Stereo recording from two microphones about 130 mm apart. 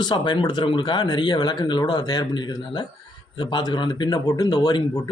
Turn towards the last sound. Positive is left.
turn(degrees=30)  # may be behind; listen again after turning